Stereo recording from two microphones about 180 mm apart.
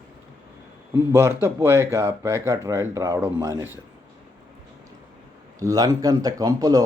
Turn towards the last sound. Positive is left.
turn(degrees=-20)  # may be behind; listen again after turning